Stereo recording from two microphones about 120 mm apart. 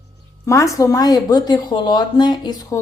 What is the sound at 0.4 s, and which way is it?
A woman's voice, 25° left (ahead or behind).